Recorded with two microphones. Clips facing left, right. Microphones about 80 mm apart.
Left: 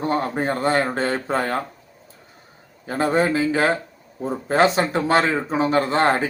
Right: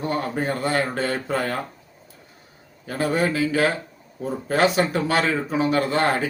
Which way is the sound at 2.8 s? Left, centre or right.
Left.